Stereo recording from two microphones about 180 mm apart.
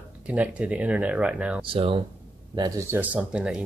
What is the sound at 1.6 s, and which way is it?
Speech, 30° right (ahead or behind).